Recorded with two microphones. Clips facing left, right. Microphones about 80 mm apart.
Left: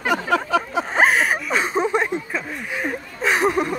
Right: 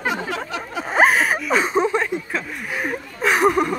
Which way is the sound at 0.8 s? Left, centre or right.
Centre.